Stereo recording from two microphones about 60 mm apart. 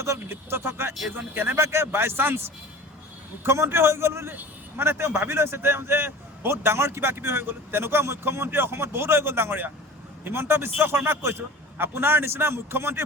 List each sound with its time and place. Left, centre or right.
0.0 s a man's voice: right
3.4 s a man's voice: right